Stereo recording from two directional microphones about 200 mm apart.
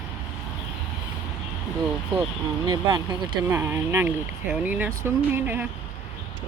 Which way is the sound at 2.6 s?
20° right (ahead or behind).